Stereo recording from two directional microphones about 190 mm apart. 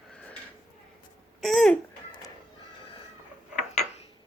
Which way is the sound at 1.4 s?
Centre (ahead or behind).